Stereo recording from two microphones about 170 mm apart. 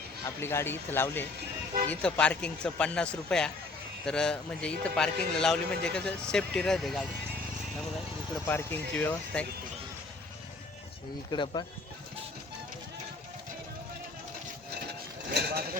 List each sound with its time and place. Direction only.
0.3 s a man's voice: 15° left (ahead or behind)
8.4 s speech: 10° left (ahead or behind)
11.3 s speech: 25° left (ahead or behind)
15.4 s speech: 70° right (ahead or behind)